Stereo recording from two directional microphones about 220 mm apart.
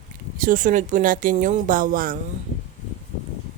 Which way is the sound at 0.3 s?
40° right (ahead or behind).